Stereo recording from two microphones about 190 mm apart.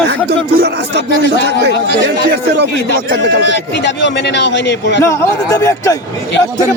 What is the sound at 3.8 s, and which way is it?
A man's voice, 65° left (ahead or behind).